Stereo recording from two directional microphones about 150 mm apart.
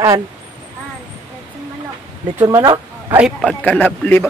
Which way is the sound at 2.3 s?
15° right (ahead or behind).